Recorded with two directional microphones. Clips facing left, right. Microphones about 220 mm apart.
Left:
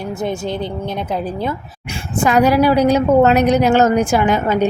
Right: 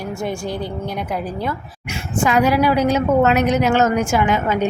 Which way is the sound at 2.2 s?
40° left (ahead or behind).